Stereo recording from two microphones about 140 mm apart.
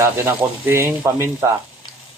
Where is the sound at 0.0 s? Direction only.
15° right (ahead or behind).